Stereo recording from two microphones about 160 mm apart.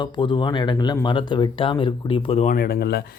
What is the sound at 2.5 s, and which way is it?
Speech, 70° left (ahead or behind).